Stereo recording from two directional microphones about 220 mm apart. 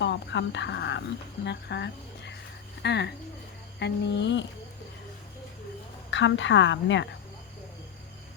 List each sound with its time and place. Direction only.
0.0 s speech: 55° left (ahead or behind)
6.1 s a woman's voice: 55° left (ahead or behind)